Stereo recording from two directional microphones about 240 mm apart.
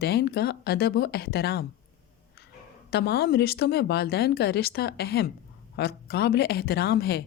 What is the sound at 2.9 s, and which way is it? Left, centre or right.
A woman's voice, left.